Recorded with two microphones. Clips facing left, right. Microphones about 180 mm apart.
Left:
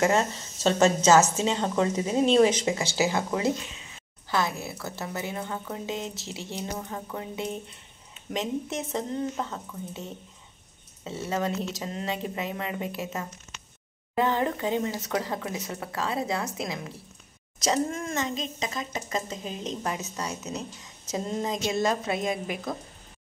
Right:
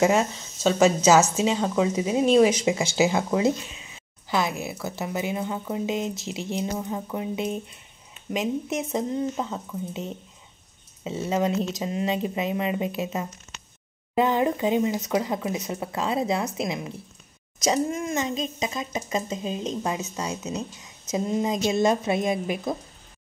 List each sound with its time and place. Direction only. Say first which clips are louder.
0.0 s a woman's voice: right 3 dB; 10° right (ahead or behind)